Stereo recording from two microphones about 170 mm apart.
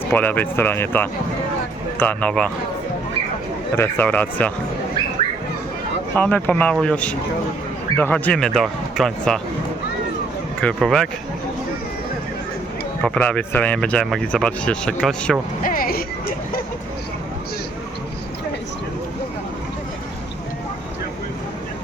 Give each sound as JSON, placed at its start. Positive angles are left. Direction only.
{"t": 0.1, "sound": "speech", "side_deg": 10}
{"t": 3.8, "sound": "speech", "side_deg": 10}
{"t": 6.1, "sound": "speech", "side_deg": 10}
{"t": 10.6, "sound": "speech", "side_deg": 5}
{"t": 13.0, "sound": "speech", "side_deg": 5}
{"t": 15.6, "sound": "speech", "side_deg": 55}